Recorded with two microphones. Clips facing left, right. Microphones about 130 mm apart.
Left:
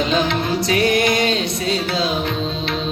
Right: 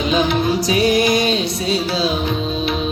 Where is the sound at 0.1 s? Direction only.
15° right (ahead or behind).